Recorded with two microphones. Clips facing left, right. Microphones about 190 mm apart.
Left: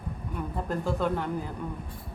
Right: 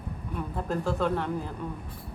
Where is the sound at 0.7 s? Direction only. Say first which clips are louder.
Right 1 dB; centre (ahead or behind).